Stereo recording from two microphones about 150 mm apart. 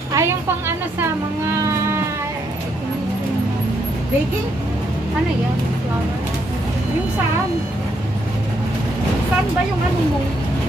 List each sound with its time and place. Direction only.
0.1 s a woman's voice: 15° right (ahead or behind)